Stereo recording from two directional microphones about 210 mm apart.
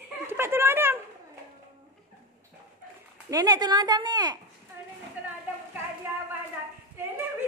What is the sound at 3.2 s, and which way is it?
Speech, 15° right (ahead or behind).